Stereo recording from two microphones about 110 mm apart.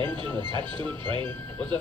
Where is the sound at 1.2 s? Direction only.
15° left (ahead or behind).